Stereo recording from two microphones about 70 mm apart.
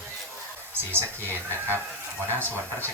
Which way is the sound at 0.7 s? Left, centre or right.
Right.